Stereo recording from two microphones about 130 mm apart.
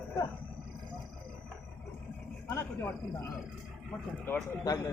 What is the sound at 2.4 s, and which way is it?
Speech, 15° left (ahead or behind).